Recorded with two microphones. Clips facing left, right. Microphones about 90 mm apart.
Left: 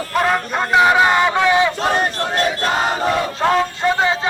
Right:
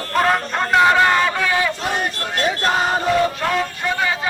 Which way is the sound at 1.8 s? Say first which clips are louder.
Left 5 dB; 35° left (ahead or behind).